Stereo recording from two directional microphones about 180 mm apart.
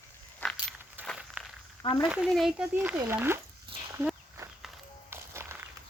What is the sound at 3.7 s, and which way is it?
Livestock, 30° right (ahead or behind).